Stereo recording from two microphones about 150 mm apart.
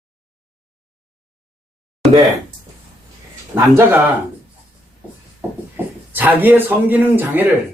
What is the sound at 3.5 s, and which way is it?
Speech, 5° right (ahead or behind).